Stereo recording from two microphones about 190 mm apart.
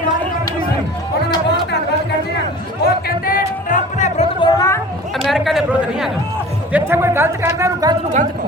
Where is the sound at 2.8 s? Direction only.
50° left (ahead or behind).